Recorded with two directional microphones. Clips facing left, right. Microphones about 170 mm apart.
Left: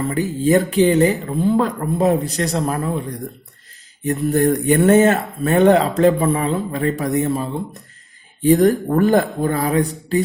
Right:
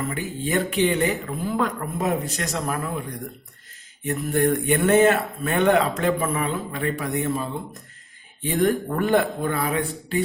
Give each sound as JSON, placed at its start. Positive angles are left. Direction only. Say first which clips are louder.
{"t": 0.1, "sound": "speech", "louder": "left 9 dB", "side_deg": 35}